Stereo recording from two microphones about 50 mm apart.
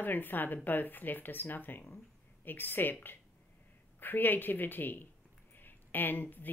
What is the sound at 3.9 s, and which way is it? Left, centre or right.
A woman's voice, left.